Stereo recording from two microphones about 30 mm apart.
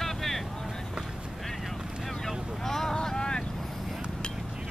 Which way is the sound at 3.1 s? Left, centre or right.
Left.